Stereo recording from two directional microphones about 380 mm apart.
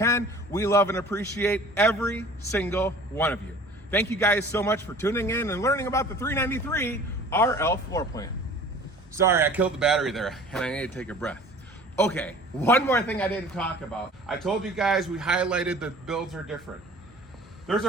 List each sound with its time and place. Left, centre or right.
0.0 s a man's voice: centre
9.1 s a man's voice: centre
17.7 s a man's voice: centre